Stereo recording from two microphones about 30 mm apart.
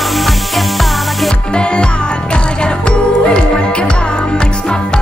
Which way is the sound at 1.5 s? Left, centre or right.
Left.